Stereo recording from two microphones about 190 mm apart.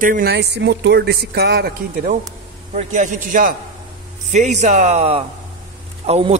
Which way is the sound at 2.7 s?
40° right (ahead or behind).